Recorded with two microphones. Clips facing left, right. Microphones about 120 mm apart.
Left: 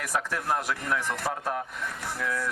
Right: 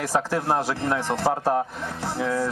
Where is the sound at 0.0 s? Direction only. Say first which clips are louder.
Right 6 dB; 30° right (ahead or behind).